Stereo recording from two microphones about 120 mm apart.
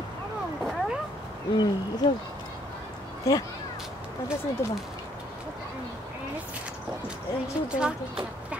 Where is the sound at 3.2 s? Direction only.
25° left (ahead or behind).